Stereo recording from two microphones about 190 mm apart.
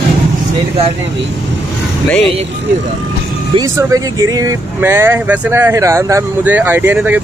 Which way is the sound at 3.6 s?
15° right (ahead or behind).